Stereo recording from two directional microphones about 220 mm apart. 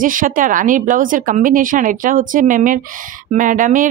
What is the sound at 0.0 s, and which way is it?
Speech, 40° right (ahead or behind).